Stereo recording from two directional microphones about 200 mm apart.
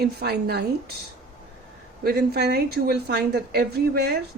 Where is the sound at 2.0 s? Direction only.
55° right (ahead or behind).